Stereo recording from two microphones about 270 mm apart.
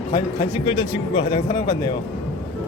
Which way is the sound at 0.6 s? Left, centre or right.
Centre.